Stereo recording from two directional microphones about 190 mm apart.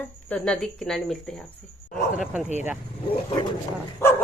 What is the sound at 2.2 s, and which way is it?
Speech, 5° right (ahead or behind).